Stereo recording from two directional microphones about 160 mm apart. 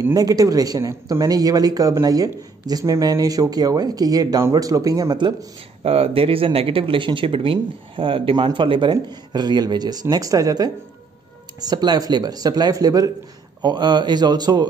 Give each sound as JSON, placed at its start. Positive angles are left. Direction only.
{"t": 0.0, "sound": "speech", "side_deg": -20}
{"t": 5.9, "sound": "speech", "side_deg": -35}